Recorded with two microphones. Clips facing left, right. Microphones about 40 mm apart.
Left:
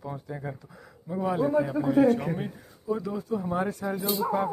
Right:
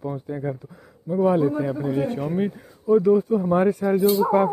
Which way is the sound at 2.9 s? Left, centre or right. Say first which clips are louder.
Right 12 dB; right.